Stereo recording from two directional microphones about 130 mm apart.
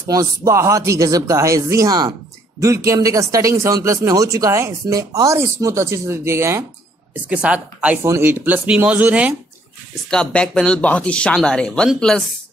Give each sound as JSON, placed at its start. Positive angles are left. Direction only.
{"t": 0.0, "sound": "speech", "side_deg": -25}
{"t": 7.2, "sound": "speech", "side_deg": -10}
{"t": 10.0, "sound": "speech", "side_deg": 5}